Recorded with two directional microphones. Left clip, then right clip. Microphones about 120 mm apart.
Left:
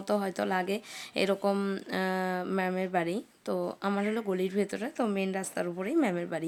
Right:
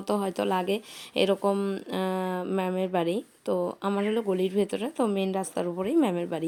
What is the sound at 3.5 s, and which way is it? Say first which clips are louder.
A woman's voice: right 2 dB; 5° right (ahead or behind).